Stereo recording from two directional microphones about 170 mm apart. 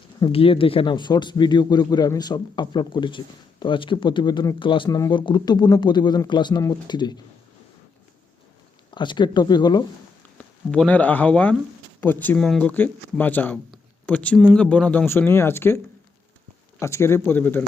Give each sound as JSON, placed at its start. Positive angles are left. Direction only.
{"t": 0.2, "sound": "speech", "side_deg": 35}
{"t": 9.0, "sound": "speech", "side_deg": 25}
{"t": 10.3, "sound": "speech", "side_deg": 5}
{"t": 16.8, "sound": "speech", "side_deg": 15}